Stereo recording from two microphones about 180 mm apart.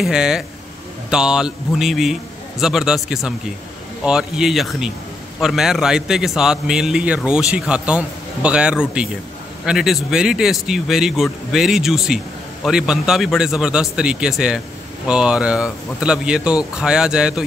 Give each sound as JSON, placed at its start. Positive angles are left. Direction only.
{"t": 0.0, "sound": "a man's voice", "side_deg": -5}